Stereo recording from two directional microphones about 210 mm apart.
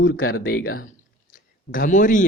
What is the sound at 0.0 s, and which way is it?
Speech, 70° left (ahead or behind).